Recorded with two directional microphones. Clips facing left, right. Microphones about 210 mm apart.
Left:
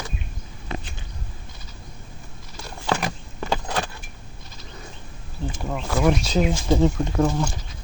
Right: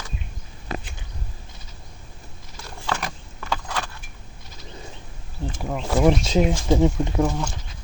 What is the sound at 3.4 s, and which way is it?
Keys jangling, 25° left (ahead or behind).